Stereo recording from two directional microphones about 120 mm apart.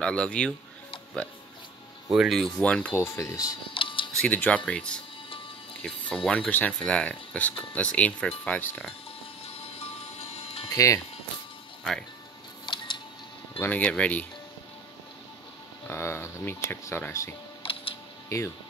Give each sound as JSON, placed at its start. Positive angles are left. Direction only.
{"t": 0.0, "sound": "speech", "side_deg": 10}
{"t": 2.0, "sound": "speech", "side_deg": 0}
{"t": 2.9, "sound": "speech", "side_deg": 20}
{"t": 3.7, "sound": "music", "side_deg": 45}
{"t": 4.2, "sound": "speech", "side_deg": 10}
{"t": 10.3, "sound": "music", "side_deg": 55}
{"t": 10.7, "sound": "speech", "side_deg": 30}
{"t": 12.6, "sound": "music", "side_deg": 40}
{"t": 13.6, "sound": "speech", "side_deg": 15}
{"t": 15.9, "sound": "speech", "side_deg": 20}